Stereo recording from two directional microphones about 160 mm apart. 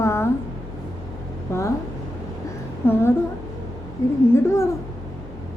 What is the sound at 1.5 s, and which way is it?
Speech, 15° left (ahead or behind).